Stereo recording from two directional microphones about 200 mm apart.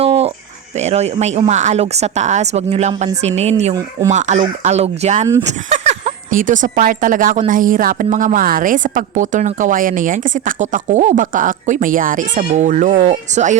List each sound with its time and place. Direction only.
0.0 s music: 30° right (ahead or behind)
0.8 s speech: 35° right (ahead or behind)